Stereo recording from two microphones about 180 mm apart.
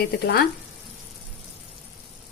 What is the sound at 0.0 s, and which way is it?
Speech, 60° left (ahead or behind).